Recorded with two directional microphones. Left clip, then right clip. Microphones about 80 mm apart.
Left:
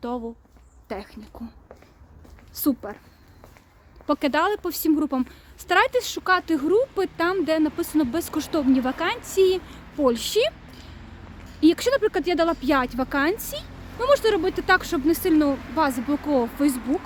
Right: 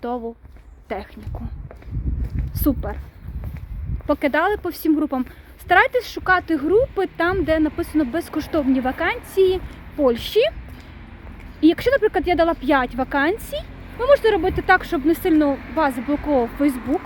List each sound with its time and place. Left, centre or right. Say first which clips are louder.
0.9 s speech: right 5 dB; left
2.6 s speech: right 3 dB; centre
4.0 s speech: right 3 dB; left
11.6 s speech: right 3 dB; left